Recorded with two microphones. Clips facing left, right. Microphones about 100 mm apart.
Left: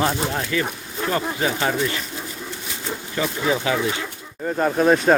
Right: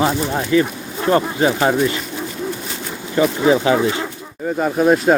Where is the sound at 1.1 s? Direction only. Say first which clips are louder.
Right 8 dB; 35° right (ahead or behind).